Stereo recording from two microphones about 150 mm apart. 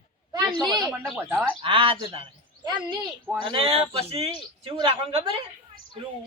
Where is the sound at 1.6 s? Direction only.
35° right (ahead or behind).